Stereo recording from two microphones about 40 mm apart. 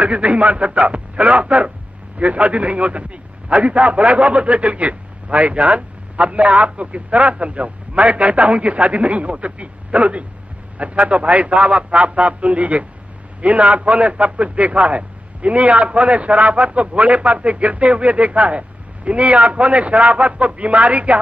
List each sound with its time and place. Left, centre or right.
0.0 s a man's voice: right